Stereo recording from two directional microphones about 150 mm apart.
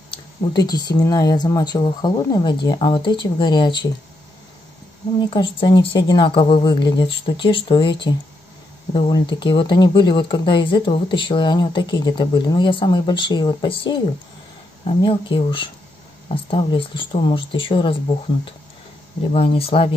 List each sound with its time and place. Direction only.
0.1 s speech: 25° left (ahead or behind)
5.3 s speech: 35° left (ahead or behind)
15.0 s speech: 35° left (ahead or behind)